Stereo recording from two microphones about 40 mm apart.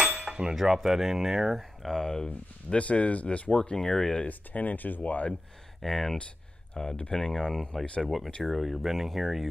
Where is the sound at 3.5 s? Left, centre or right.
Left.